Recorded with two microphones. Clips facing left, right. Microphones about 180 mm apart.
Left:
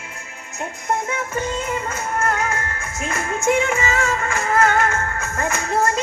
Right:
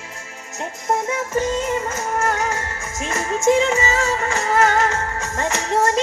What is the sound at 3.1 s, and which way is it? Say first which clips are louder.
Music: right 3 dB; 40° right (ahead or behind).